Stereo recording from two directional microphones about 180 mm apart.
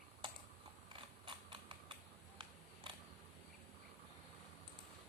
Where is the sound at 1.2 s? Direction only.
25° right (ahead or behind).